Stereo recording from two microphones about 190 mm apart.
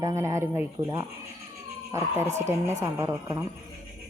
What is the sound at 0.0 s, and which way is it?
Speech, 15° right (ahead or behind).